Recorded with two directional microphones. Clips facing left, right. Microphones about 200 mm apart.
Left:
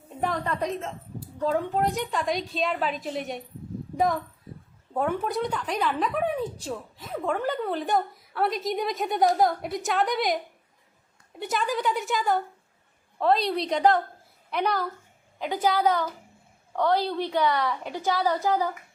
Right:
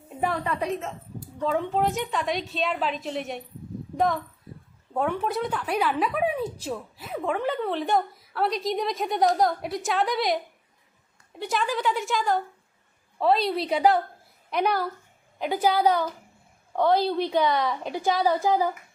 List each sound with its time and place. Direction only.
0.2 s a woman's voice: 5° right (ahead or behind)